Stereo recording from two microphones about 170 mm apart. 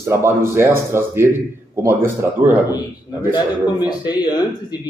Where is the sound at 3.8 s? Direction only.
25° left (ahead or behind).